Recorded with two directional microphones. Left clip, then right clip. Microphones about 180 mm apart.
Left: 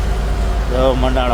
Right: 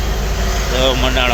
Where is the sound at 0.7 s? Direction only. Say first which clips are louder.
Even; 20° left (ahead or behind).